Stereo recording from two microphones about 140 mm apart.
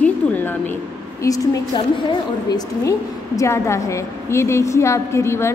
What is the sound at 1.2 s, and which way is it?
A woman's voice, 25° left (ahead or behind).